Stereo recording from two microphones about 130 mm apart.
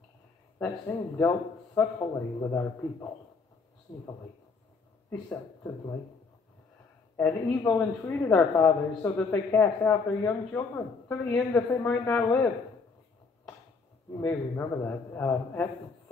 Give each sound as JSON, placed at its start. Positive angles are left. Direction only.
{"t": 0.8, "sound": "a man's voice", "side_deg": 20}
{"t": 7.2, "sound": "speech", "side_deg": 15}
{"t": 14.1, "sound": "speech", "side_deg": 15}